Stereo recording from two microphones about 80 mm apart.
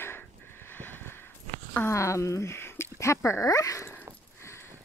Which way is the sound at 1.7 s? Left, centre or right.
Left.